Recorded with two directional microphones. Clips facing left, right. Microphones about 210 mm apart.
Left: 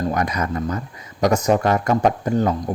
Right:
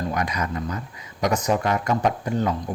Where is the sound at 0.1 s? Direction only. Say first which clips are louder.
Left 4 dB; 45° left (ahead or behind).